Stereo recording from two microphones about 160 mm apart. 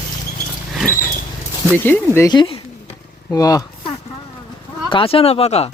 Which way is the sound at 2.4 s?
35° left (ahead or behind).